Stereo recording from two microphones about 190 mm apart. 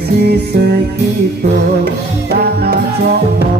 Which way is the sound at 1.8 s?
60° right (ahead or behind).